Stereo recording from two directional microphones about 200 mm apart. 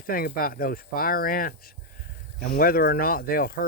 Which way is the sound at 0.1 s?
45° left (ahead or behind).